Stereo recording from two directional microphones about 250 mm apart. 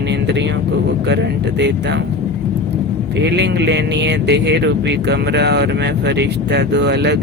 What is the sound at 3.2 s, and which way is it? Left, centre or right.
Speech, right.